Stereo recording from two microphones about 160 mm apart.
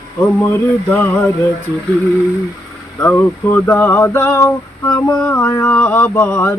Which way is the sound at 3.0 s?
10° left (ahead or behind).